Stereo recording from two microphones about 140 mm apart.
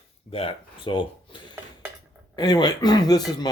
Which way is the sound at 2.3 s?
30° left (ahead or behind).